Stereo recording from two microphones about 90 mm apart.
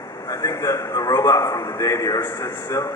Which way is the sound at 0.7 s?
40° left (ahead or behind).